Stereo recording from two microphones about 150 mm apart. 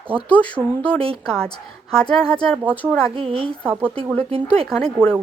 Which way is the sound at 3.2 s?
35° right (ahead or behind).